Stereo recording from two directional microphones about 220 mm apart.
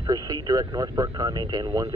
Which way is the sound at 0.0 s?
15° right (ahead or behind).